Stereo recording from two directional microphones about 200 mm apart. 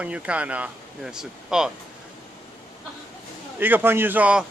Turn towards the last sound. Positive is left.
turn(degrees=-5)  # may be behind; listen again after turning